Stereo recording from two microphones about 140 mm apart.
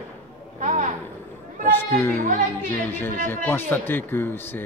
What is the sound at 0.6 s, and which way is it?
Speech, 60° right (ahead or behind).